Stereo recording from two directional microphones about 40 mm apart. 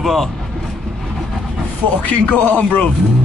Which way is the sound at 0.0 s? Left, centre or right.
Centre.